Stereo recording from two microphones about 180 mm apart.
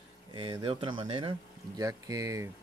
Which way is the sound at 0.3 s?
25° right (ahead or behind).